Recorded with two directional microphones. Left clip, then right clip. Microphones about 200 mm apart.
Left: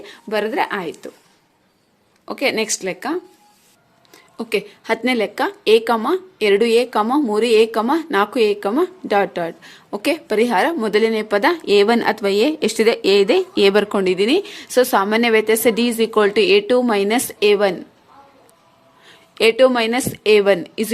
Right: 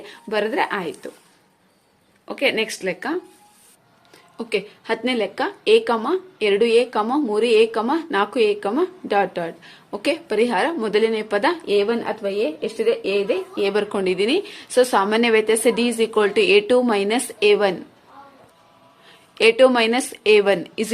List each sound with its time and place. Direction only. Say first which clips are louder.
0.0 s speech: left 1 dB; 15° left (ahead or behind)
2.2 s a woman's voice: left 1 dB; 25° left (ahead or behind)
19.0 s a woman's voice: left 1 dB; 20° left (ahead or behind)